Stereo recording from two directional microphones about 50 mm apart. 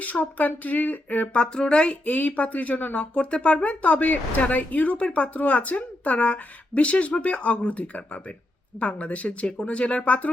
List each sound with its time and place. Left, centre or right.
0.0 s speech: left
1.4 s speech: centre